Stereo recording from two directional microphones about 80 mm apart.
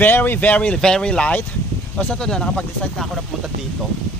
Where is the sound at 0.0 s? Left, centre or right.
Left.